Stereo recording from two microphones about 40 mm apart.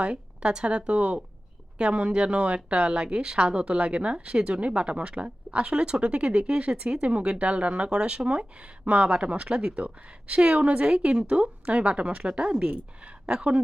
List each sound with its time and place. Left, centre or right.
0.0 s a woman's voice: right